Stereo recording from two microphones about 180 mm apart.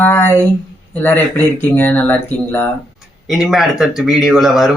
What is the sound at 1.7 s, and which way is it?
Speech, 10° left (ahead or behind).